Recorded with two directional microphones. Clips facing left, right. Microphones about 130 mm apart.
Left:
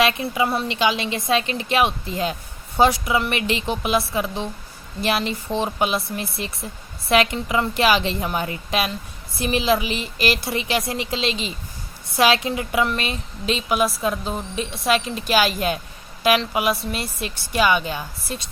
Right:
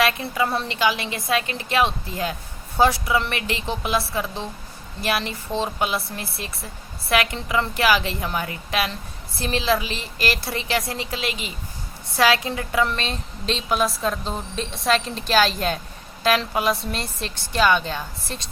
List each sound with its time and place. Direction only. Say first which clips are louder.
0.0 s a woman's voice: left 2 dB; 20° left (ahead or behind)